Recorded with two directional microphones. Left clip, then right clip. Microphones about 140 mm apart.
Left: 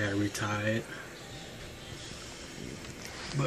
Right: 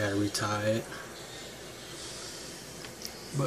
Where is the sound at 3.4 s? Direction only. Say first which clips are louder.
Right 1 dB; 5° right (ahead or behind).